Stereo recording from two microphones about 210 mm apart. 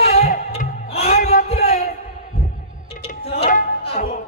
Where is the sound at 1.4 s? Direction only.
30° left (ahead or behind).